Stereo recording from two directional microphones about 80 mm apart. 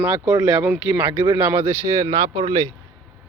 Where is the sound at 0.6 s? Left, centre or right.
Right.